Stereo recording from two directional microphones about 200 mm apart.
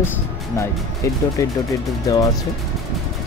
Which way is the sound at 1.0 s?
15° left (ahead or behind).